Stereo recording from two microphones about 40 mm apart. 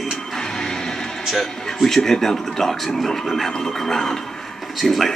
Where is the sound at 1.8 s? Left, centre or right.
Centre.